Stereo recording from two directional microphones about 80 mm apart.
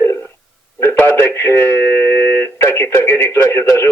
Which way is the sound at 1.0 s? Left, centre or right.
Left.